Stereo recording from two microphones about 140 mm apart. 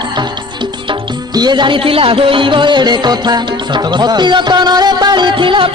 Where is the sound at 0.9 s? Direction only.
30° right (ahead or behind).